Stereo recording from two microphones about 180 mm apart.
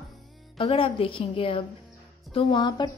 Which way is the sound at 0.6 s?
30° left (ahead or behind).